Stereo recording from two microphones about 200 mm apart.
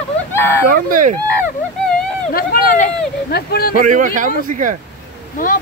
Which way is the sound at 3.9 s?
40° right (ahead or behind).